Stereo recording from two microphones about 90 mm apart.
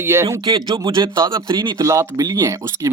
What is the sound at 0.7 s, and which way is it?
Speech, 65° right (ahead or behind).